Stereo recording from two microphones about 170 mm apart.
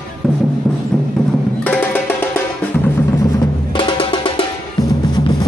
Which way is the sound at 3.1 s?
25° left (ahead or behind).